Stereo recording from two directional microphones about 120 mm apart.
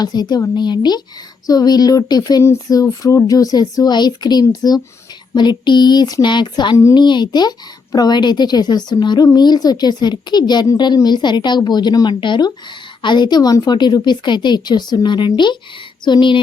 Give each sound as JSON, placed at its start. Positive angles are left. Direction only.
{"t": 0.0, "sound": "speech", "side_deg": 35}